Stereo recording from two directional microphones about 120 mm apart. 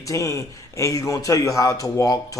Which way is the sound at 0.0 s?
25° left (ahead or behind).